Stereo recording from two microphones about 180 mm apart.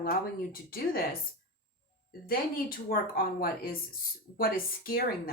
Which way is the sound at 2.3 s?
55° left (ahead or behind).